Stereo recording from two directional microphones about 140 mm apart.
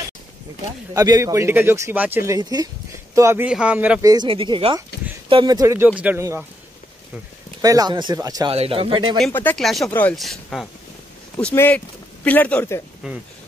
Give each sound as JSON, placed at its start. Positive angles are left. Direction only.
{"t": 0.9, "sound": "speech", "side_deg": -25}
{"t": 3.4, "sound": "speech", "side_deg": -10}
{"t": 4.0, "sound": "speech", "side_deg": -25}
{"t": 4.3, "sound": "speech", "side_deg": -40}
{"t": 5.9, "sound": "speech", "side_deg": -10}
{"t": 7.6, "sound": "speech", "side_deg": -25}
{"t": 8.5, "sound": "speech", "side_deg": -40}
{"t": 9.3, "sound": "speech", "side_deg": 15}
{"t": 9.6, "sound": "speech", "side_deg": 0}
{"t": 9.8, "sound": "speech", "side_deg": 10}
{"t": 10.1, "sound": "speech", "side_deg": 0}
{"t": 11.3, "sound": "speech", "side_deg": 15}